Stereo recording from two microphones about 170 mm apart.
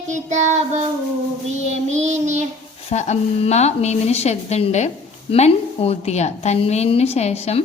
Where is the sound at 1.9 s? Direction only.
45° right (ahead or behind).